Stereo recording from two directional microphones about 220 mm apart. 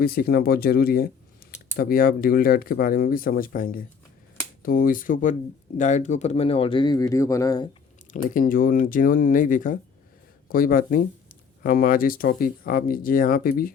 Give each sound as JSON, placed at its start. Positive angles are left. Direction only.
{"t": 0.0, "sound": "speech", "side_deg": 45}
{"t": 8.1, "sound": "speech", "side_deg": 40}